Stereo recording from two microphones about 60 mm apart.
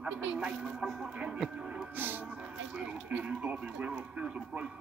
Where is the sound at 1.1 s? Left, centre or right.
Centre.